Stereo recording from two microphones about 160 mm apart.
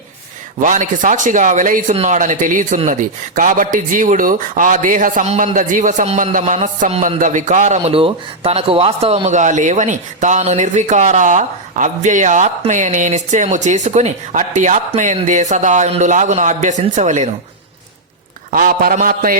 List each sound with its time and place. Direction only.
0.6 s speech: 55° right (ahead or behind)
18.5 s a man's voice: 65° right (ahead or behind)